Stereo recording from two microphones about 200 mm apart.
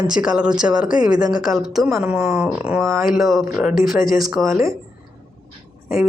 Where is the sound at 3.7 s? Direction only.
45° left (ahead or behind).